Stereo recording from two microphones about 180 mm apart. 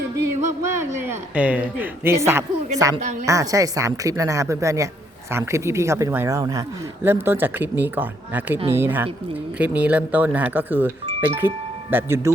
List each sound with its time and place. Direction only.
0.8 s a woman's voice: 10° right (ahead or behind)